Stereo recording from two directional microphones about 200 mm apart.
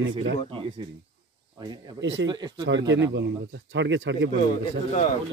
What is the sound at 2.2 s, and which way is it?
Speech, 20° right (ahead or behind).